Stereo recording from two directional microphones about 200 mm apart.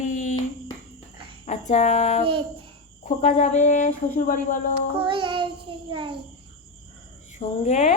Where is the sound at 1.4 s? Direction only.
35° left (ahead or behind).